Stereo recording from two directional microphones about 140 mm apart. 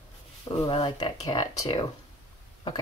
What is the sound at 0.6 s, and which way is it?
Speech, 35° left (ahead or behind).